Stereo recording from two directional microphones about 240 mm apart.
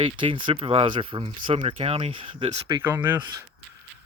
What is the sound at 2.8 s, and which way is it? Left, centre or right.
Speech, centre.